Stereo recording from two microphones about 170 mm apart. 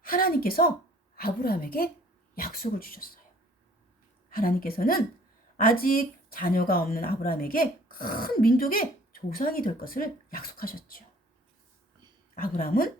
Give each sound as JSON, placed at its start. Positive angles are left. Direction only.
{"t": 0.0, "sound": "a sound", "side_deg": 55}
{"t": 1.1, "sound": "speech", "side_deg": 60}
{"t": 4.3, "sound": "speech", "side_deg": 60}
{"t": 12.3, "sound": "speech", "side_deg": 60}